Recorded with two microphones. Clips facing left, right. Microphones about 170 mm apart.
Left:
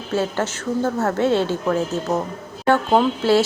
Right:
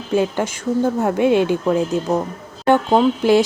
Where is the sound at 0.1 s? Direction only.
15° right (ahead or behind).